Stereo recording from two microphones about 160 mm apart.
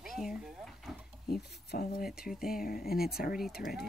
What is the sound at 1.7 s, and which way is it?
Speech, 70° left (ahead or behind).